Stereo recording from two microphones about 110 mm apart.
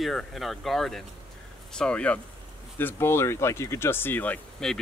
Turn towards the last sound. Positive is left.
turn(degrees=5)  # may be behind; listen again after turning